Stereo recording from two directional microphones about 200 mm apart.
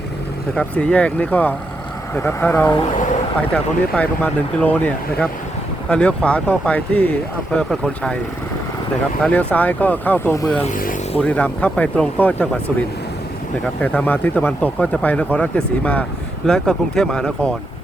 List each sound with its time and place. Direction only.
0.5 s speech: 5° left (ahead or behind)
9.2 s speech: 5° left (ahead or behind)
10.6 s speech: 40° left (ahead or behind)
11.2 s speech: 5° left (ahead or behind)
13.8 s speech: 5° left (ahead or behind)